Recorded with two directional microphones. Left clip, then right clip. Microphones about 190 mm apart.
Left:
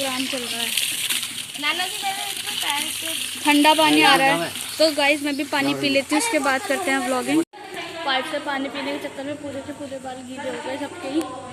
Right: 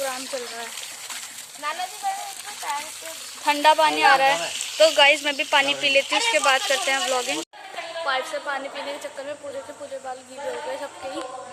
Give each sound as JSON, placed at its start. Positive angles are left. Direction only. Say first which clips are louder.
{"t": 2.6, "sound": "speech", "louder": "left 4 dB", "side_deg": 0}
{"t": 4.8, "sound": "speech", "louder": "right 3 dB", "side_deg": -20}
{"t": 5.7, "sound": "speech", "louder": "right 1 dB", "side_deg": 0}